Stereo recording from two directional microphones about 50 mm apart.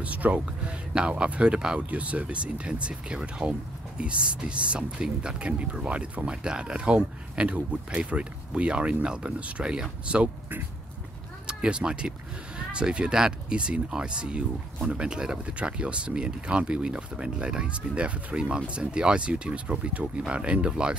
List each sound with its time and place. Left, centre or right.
0.0 s speech: right
0.7 s speech: centre
11.4 s speech: centre